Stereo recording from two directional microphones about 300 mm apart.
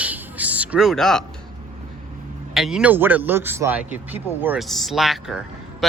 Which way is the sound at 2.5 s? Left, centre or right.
Centre.